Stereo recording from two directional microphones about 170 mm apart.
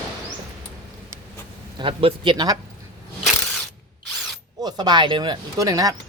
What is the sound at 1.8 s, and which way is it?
Speech, 35° right (ahead or behind).